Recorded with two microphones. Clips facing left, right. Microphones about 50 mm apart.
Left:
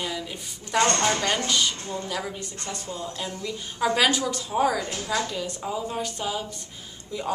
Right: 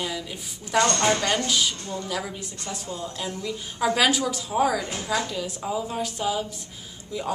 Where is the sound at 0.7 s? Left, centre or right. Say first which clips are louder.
Even; left.